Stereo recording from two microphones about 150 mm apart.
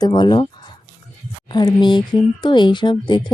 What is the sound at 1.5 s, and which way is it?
Speech, 30° left (ahead or behind).